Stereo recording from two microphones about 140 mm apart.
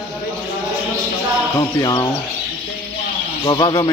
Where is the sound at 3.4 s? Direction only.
35° left (ahead or behind).